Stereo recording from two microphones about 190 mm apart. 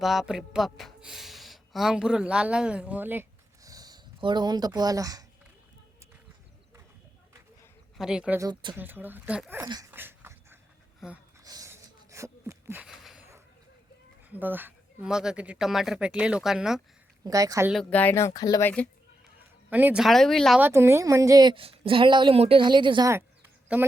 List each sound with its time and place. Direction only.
0.0 s speech: centre (ahead or behind); by 5.2 s 20° right (ahead or behind)
7.9 s speech: 5° right (ahead or behind)
8.4 s a woman's voice: 20° right (ahead or behind)
8.7 s speech: 10° right (ahead or behind)
9.6 s dog: 20° right (ahead or behind)
11.0 s speech: 5° right (ahead or behind)
11.4 s a sound: 20° right (ahead or behind); by 13.2 s centre (ahead or behind)
14.3 s speech: 10° right (ahead or behind)
17.2 s speech: 15° right (ahead or behind)
17.7 s speech: 5° left (ahead or behind)
19.7 s speech: 5° right (ahead or behind)
20.6 s a woman's voice: 10° right (ahead or behind)